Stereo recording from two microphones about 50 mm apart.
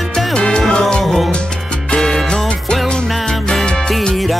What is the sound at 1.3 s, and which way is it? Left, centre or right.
Salsa music, centre.